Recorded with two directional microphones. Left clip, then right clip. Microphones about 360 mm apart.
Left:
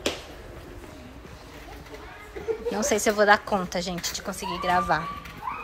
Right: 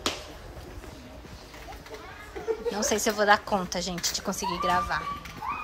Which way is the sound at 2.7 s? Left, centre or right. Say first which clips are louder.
Left 4 dB; centre.